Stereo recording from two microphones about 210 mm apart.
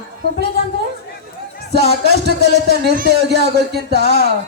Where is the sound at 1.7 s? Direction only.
50° right (ahead or behind).